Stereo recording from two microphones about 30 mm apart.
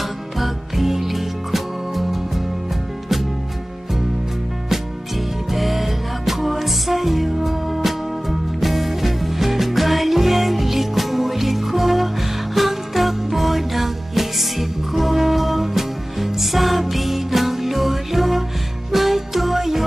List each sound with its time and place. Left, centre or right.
0.0 s music: centre
5.5 s music: centre